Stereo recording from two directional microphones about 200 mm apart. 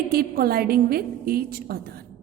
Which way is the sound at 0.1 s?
50° right (ahead or behind).